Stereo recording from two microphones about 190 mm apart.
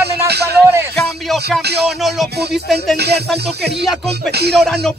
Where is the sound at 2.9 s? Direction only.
60° right (ahead or behind).